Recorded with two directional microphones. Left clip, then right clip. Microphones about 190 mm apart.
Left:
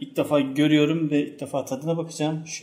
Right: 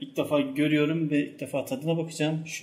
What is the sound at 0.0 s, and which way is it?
Speech, 30° left (ahead or behind).